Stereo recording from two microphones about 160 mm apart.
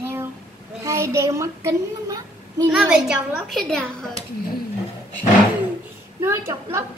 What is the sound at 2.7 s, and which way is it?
A woman's voice, 5° right (ahead or behind).